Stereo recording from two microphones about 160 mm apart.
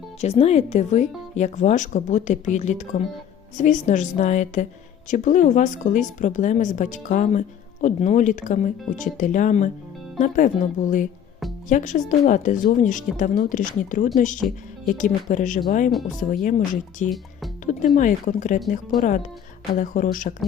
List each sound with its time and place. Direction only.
0.2 s a woman's voice: 40° left (ahead or behind); by 20.3 s 55° left (ahead or behind)